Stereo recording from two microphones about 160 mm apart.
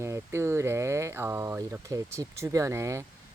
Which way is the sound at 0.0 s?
15° right (ahead or behind).